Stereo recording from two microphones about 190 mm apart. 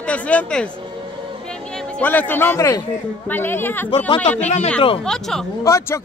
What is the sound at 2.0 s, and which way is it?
A man's voice, 10° left (ahead or behind).